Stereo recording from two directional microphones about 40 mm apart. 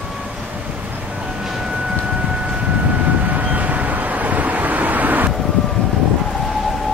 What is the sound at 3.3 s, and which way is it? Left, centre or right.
Vehicle, right.